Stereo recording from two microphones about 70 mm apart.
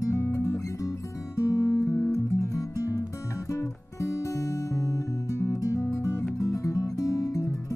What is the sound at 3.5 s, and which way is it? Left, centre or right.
Music, left.